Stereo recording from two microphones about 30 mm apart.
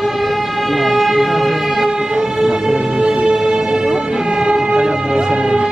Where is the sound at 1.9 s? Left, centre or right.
Right.